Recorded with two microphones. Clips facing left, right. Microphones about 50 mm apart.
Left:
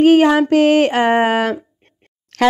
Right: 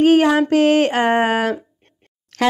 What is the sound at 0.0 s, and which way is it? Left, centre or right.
Speech, left.